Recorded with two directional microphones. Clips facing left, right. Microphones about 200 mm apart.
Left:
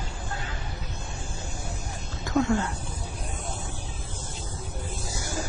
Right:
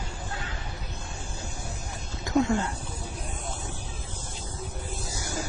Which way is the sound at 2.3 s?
20° right (ahead or behind).